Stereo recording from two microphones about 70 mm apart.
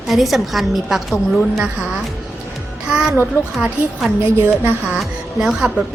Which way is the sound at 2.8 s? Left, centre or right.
Centre.